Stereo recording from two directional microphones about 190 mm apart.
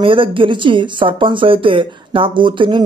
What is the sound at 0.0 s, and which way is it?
Speech, 25° right (ahead or behind).